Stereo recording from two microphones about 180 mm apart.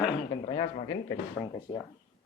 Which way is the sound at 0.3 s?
30° left (ahead or behind).